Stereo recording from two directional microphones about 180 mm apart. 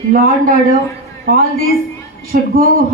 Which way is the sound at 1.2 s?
55° right (ahead or behind).